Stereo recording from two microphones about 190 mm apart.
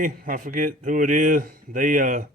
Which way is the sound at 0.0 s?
45° right (ahead or behind).